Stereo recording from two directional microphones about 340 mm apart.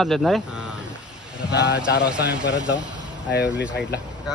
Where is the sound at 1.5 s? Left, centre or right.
Left.